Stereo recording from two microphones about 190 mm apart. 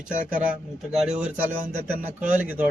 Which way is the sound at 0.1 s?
5° right (ahead or behind).